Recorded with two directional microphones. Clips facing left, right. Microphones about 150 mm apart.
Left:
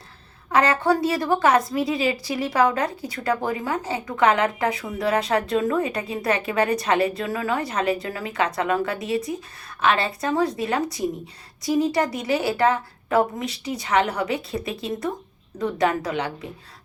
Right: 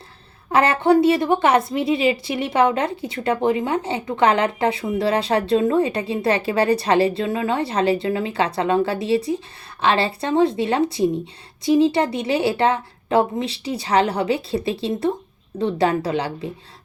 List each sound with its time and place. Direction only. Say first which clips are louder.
0.5 s a woman's voice: right 4 dB; 25° right (ahead or behind)